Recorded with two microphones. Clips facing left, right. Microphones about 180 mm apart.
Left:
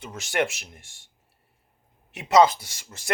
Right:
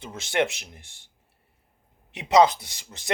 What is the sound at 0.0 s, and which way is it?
Speech, 25° right (ahead or behind).